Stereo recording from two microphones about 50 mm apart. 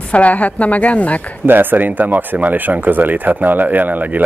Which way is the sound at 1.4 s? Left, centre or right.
Right.